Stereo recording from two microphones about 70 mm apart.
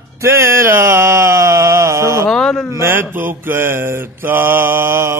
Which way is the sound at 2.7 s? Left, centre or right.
Right.